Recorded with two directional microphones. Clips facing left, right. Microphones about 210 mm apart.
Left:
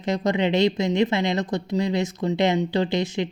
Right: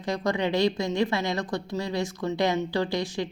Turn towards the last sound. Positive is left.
turn(degrees=20)  # may be behind; listen again after turning